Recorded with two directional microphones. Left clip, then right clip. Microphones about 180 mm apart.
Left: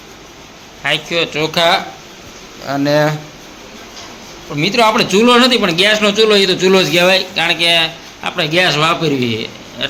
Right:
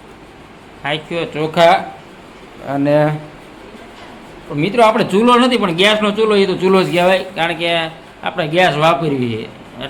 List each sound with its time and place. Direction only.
0.8 s a man's voice: 5° right (ahead or behind)
4.5 s a man's voice: centre (ahead or behind)